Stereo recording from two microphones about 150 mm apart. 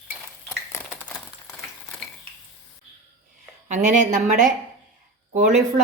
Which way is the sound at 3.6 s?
55° right (ahead or behind).